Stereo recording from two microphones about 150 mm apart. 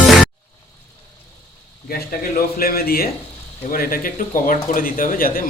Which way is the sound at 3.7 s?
75° left (ahead or behind).